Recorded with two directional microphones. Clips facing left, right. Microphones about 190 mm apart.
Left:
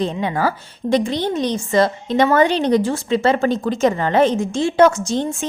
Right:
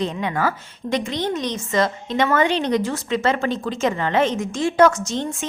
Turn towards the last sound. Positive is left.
turn(degrees=30)  # may be behind; listen again after turning